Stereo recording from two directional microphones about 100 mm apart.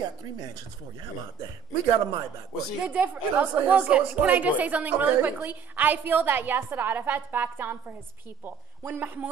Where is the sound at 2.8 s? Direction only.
15° right (ahead or behind).